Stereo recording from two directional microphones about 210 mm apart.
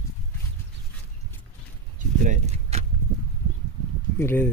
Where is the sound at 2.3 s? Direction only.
30° right (ahead or behind).